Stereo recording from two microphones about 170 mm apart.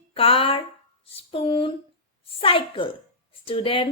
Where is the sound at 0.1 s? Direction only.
35° left (ahead or behind).